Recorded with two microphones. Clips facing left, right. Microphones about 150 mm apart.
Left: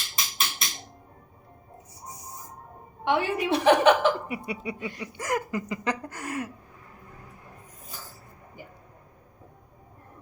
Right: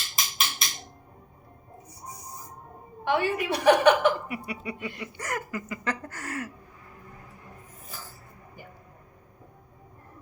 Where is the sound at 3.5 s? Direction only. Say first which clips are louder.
Even; 25° left (ahead or behind).